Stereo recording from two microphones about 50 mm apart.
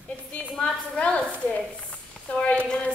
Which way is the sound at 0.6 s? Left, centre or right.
Centre.